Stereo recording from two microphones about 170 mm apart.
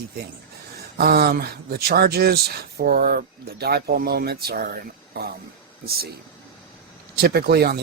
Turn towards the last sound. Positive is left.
turn(degrees=-65)  # may be behind; listen again after turning